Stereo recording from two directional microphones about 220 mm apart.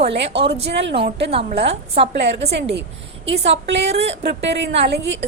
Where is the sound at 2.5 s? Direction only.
50° right (ahead or behind).